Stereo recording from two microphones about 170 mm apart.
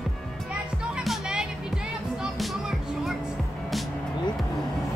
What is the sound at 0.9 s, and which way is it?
Music, centre (ahead or behind).